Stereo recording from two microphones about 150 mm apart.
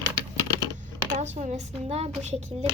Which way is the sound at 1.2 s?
45° right (ahead or behind).